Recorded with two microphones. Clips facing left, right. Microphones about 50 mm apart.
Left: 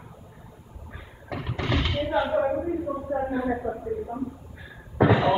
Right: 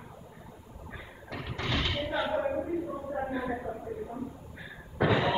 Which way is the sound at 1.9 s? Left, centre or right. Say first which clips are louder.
Left 6 dB; centre.